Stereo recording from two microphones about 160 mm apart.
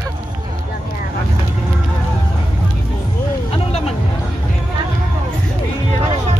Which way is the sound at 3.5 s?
40° left (ahead or behind).